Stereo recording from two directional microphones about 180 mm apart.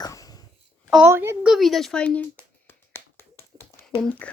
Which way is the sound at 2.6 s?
15° left (ahead or behind).